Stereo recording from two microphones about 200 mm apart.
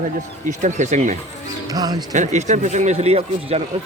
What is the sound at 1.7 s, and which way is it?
Speech, 20° right (ahead or behind).